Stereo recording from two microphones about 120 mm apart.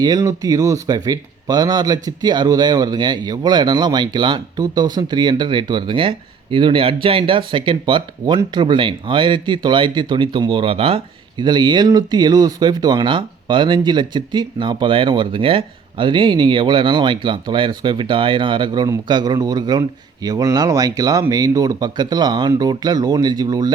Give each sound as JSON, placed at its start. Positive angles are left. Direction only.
{"t": 0.0, "sound": "speech", "side_deg": -30}